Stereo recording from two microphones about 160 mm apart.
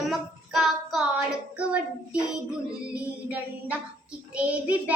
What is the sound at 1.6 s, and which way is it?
Child singing, 10° right (ahead or behind).